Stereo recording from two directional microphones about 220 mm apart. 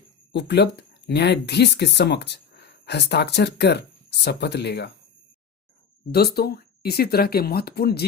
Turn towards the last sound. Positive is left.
turn(degrees=45)  # may be behind; listen again after turning